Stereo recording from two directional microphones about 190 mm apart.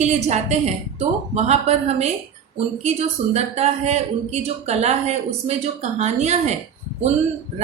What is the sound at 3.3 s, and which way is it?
Speech, 35° right (ahead or behind).